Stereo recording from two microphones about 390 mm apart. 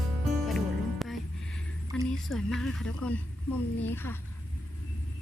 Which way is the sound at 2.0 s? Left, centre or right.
Centre.